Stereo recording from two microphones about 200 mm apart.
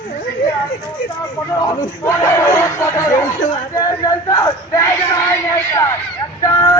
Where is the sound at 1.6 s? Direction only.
15° left (ahead or behind).